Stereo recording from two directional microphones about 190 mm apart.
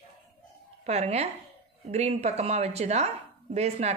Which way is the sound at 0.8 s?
35° right (ahead or behind).